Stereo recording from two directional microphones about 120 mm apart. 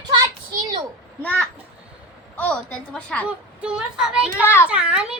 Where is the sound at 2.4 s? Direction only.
10° left (ahead or behind).